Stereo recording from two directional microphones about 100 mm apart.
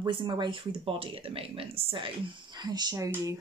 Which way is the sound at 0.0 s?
50° right (ahead or behind).